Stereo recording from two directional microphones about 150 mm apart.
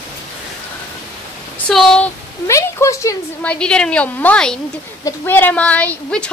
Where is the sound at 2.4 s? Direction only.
20° left (ahead or behind).